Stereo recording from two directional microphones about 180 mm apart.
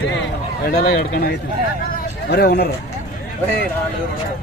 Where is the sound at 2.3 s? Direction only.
65° left (ahead or behind).